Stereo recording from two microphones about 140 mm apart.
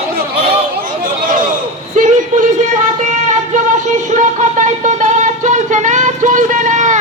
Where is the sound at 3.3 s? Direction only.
60° right (ahead or behind).